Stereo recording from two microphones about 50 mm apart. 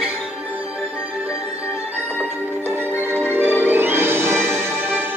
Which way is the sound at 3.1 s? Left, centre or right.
Right.